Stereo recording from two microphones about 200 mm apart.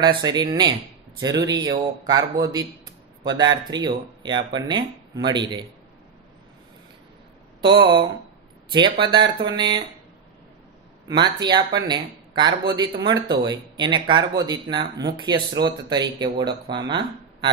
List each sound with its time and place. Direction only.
0.2 s a man's voice: 20° right (ahead or behind)
7.6 s a man's voice: 25° right (ahead or behind)
9.0 s a man's voice: 25° right (ahead or behind)
11.1 s a man's voice: 20° right (ahead or behind)